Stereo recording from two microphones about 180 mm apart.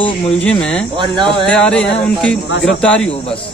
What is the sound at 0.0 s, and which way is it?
Speech, 5° left (ahead or behind).